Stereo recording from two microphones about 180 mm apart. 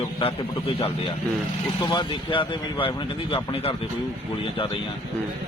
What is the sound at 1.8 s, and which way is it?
Speech, 25° left (ahead or behind).